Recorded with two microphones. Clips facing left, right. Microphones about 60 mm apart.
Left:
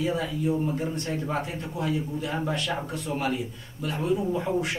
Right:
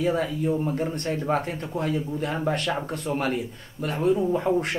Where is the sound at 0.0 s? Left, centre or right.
Right.